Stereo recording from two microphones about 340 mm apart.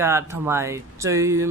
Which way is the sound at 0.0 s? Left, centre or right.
Centre.